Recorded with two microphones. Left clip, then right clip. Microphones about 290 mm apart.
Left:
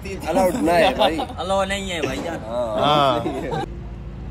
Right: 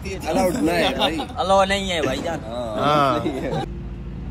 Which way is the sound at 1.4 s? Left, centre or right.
Centre.